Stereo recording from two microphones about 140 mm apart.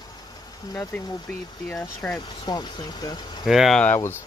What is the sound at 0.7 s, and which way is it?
Speech, 15° left (ahead or behind).